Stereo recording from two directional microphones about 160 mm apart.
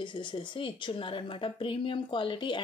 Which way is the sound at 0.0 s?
30° left (ahead or behind).